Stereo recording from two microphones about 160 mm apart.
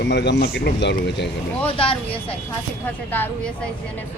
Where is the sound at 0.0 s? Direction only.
90° left.